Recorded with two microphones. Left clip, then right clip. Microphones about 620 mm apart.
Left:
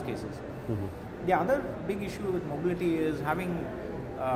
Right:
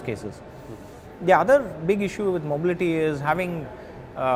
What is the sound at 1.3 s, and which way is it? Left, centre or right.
Speech, right.